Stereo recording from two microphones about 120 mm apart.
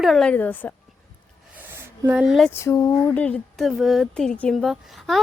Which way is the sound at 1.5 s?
20° right (ahead or behind).